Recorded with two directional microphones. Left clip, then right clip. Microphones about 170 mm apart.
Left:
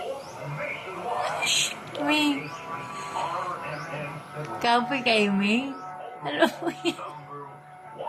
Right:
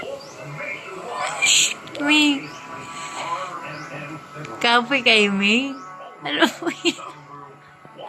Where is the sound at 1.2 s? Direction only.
10° right (ahead or behind).